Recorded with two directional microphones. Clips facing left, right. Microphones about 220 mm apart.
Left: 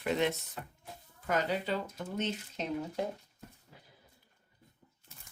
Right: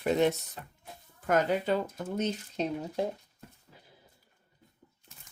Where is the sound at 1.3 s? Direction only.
50° right (ahead or behind).